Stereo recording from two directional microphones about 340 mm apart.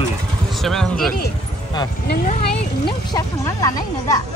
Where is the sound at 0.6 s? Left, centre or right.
Centre.